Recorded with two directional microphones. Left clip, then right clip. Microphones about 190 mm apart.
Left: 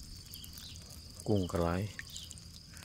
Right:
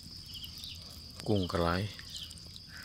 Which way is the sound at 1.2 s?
5° right (ahead or behind).